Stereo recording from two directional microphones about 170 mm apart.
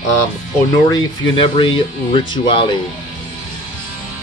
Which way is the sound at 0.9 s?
30° left (ahead or behind).